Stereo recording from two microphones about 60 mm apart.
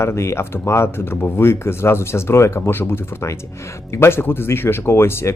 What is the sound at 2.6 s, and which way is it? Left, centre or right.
Speech, left.